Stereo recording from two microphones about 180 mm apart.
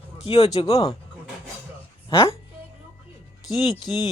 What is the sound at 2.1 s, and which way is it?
Speech, 15° left (ahead or behind).